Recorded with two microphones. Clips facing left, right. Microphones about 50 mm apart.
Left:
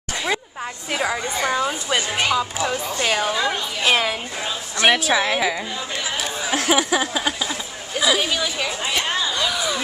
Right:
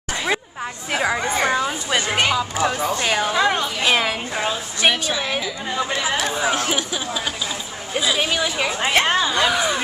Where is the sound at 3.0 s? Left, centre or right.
Centre.